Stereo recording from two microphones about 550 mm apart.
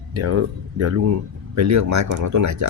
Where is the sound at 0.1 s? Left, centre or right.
Right.